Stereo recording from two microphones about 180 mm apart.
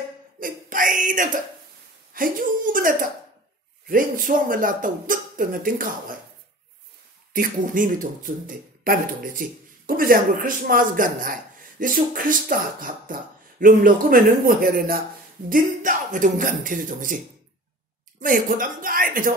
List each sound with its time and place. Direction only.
0.4 s speech: 50° right (ahead or behind)
7.3 s speech: 50° right (ahead or behind)
18.2 s speech: 50° right (ahead or behind)